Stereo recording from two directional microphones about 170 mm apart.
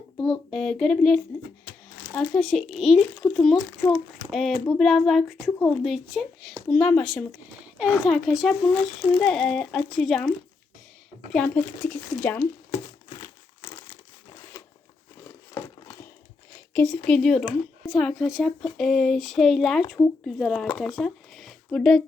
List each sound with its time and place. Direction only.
0.2 s a child's voice: 5° left (ahead or behind)
3.8 s speech: 10° left (ahead or behind)
4.3 s a child's voice: centre (ahead or behind)
11.4 s speech: 5° left (ahead or behind)
13.1 s crumpling: 30° left (ahead or behind)
15.2 s crumpling: 15° left (ahead or behind)
16.7 s a child's voice: 5° left (ahead or behind)